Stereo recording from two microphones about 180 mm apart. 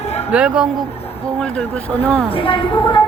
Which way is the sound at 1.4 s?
5° left (ahead or behind).